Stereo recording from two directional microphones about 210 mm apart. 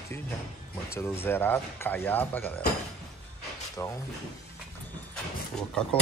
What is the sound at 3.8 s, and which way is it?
Speech, 15° left (ahead or behind).